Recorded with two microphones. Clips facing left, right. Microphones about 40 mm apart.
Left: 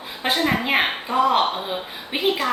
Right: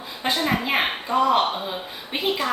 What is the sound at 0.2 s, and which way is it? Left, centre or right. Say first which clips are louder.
A woman's voice: left 2 dB; left.